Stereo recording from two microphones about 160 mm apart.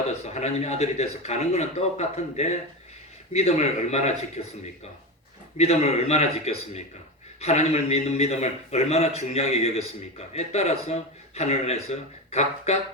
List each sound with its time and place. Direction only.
0.3 s a man's voice: 45° left (ahead or behind)
5.5 s a man's voice: 40° left (ahead or behind)